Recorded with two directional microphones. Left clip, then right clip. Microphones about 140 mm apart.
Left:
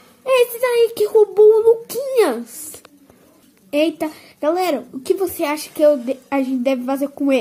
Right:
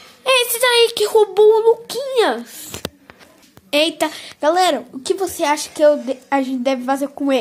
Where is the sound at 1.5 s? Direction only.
15° left (ahead or behind).